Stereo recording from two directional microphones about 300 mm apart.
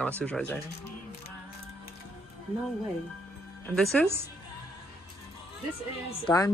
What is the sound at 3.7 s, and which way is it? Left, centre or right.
Speech, centre.